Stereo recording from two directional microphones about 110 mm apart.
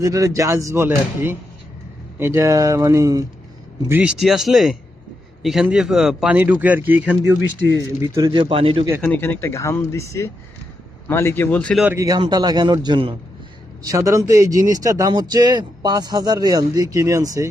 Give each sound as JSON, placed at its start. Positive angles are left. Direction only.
{"t": 0.0, "sound": "speech", "side_deg": -30}
{"t": 4.0, "sound": "speech", "side_deg": -5}
{"t": 6.3, "sound": "speech", "side_deg": -15}
{"t": 8.0, "sound": "speech", "side_deg": -30}
{"t": 8.3, "sound": "speech", "side_deg": -50}
{"t": 9.0, "sound": "speech", "side_deg": 10}
{"t": 9.2, "sound": "speech", "side_deg": 20}
{"t": 11.9, "sound": "speech", "side_deg": -35}
{"t": 13.8, "sound": "speech", "side_deg": -30}